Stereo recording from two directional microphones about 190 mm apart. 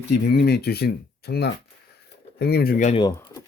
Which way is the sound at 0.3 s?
55° left (ahead or behind).